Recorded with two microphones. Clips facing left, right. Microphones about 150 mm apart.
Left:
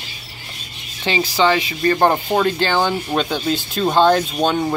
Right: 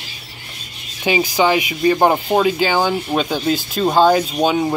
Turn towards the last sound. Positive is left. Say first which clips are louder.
# right 2 dB
turn(degrees=-5)  # may be behind; listen again after turning